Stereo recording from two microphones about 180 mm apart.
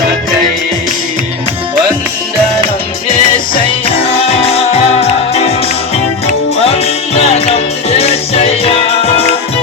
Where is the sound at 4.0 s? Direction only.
35° left (ahead or behind).